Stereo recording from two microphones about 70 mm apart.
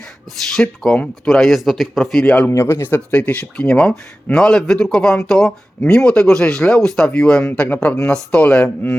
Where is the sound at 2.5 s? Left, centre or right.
Left.